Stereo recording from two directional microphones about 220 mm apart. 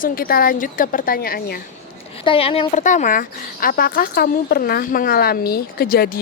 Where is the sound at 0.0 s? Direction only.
40° left (ahead or behind).